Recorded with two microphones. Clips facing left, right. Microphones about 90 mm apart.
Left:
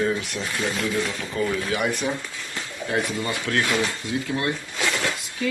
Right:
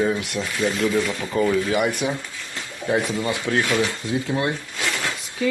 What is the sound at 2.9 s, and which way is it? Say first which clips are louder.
Speech: right 4 dB; 20° right (ahead or behind).